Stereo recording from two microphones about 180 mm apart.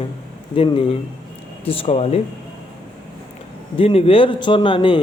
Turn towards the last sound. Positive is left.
turn(degrees=25)  # may be behind; listen again after turning